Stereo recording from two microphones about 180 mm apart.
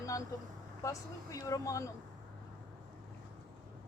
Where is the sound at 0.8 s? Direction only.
15° left (ahead or behind).